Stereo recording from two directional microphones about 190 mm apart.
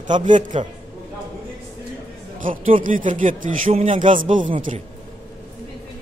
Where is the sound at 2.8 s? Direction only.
45° right (ahead or behind).